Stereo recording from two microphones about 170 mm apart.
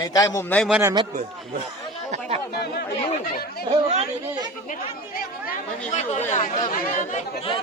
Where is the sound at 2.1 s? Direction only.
40° right (ahead or behind).